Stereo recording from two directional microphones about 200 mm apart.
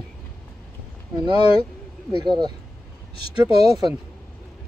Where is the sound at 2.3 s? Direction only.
20° right (ahead or behind).